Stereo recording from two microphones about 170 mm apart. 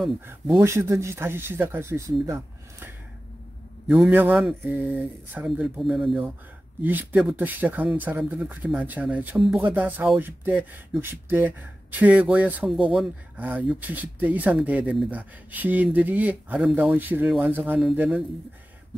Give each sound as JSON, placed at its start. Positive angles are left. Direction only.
{"t": 0.3, "sound": "speech", "side_deg": -15}
{"t": 3.8, "sound": "speech", "side_deg": -5}